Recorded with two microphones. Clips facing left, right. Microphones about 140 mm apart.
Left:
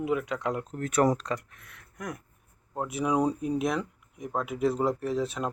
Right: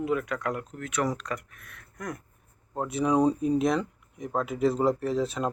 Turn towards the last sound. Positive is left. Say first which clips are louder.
# right 2 dB
turn(degrees=0)  # may be behind; listen again after turning